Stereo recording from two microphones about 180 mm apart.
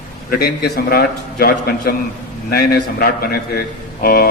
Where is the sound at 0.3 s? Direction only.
60° left (ahead or behind).